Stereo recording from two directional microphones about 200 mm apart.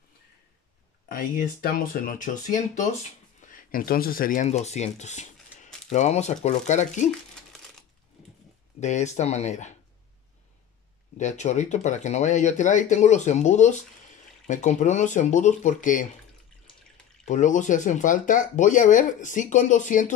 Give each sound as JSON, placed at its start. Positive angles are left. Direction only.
{"t": 1.0, "sound": "speech", "side_deg": 45}
{"t": 8.7, "sound": "speech", "side_deg": 35}
{"t": 11.1, "sound": "speech", "side_deg": 35}
{"t": 17.2, "sound": "speech", "side_deg": 40}